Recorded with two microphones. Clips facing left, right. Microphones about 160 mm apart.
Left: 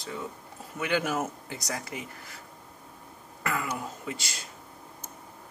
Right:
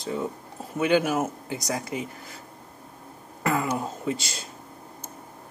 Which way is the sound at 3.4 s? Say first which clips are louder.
Right 6 dB; 30° right (ahead or behind).